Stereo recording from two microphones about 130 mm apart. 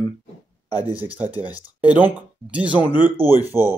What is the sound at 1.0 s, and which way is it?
Speech, 10° right (ahead or behind).